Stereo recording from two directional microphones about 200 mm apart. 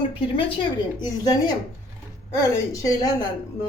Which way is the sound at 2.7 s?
15° left (ahead or behind).